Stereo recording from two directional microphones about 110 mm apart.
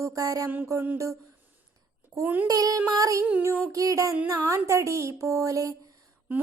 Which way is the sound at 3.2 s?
20° right (ahead or behind).